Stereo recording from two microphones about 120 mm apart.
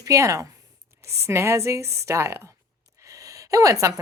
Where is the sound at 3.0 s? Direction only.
30° right (ahead or behind).